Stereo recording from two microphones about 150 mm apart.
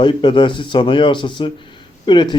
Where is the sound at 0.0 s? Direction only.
35° left (ahead or behind).